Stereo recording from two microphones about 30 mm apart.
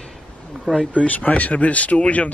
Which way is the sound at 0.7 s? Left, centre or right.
Right.